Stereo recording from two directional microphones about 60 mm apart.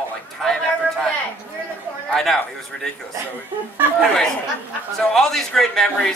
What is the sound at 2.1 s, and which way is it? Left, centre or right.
Speech, centre.